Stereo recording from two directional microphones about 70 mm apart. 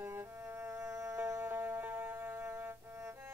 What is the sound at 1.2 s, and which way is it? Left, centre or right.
Music, right.